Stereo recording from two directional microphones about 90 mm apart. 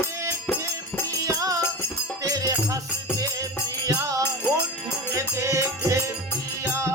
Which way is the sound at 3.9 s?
35° right (ahead or behind).